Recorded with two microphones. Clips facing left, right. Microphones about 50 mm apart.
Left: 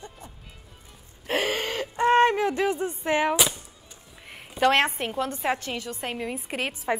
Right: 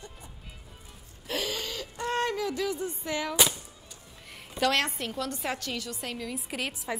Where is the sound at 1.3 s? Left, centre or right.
Left.